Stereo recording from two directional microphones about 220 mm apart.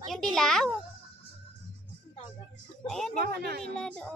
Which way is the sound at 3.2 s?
45° right (ahead or behind).